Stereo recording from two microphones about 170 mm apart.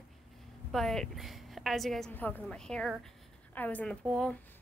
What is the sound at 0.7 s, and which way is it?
A woman's voice, centre (ahead or behind).